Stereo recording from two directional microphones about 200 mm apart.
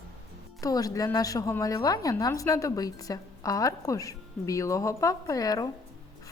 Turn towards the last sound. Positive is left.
turn(degrees=20)  # may be behind; listen again after turning